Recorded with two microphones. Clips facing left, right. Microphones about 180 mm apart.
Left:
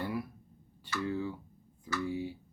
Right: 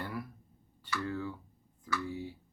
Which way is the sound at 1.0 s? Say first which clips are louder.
Left 5 dB; 20° left (ahead or behind).